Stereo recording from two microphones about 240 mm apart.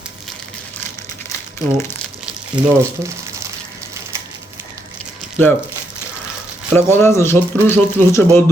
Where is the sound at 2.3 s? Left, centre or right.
Centre.